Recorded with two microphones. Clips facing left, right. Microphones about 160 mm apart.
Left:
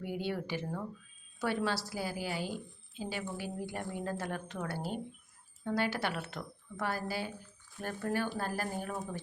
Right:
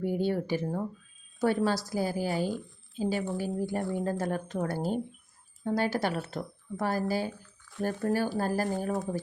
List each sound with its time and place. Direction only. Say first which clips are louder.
0.0 s a woman's voice: right 8 dB; 45° right (ahead or behind)